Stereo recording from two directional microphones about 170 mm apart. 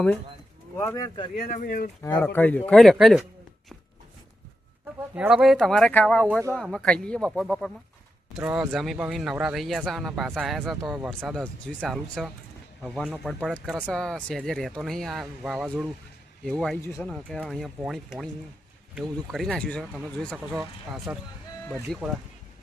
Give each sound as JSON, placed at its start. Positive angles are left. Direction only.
{"t": 0.8, "sound": "speech", "side_deg": 20}
{"t": 1.5, "sound": "speech", "side_deg": 55}
{"t": 2.1, "sound": "speech", "side_deg": 10}
{"t": 5.1, "sound": "speech", "side_deg": -5}
{"t": 19.8, "sound": "speech", "side_deg": -5}
{"t": 21.1, "sound": "speech", "side_deg": -10}
{"t": 21.9, "sound": "speech", "side_deg": 5}